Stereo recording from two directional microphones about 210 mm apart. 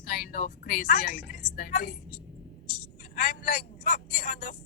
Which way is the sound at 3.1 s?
40° left (ahead or behind).